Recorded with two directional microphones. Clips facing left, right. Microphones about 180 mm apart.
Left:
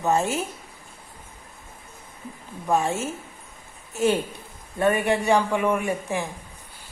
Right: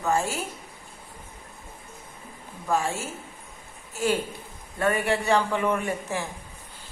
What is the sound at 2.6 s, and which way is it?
A woman's voice, 20° left (ahead or behind).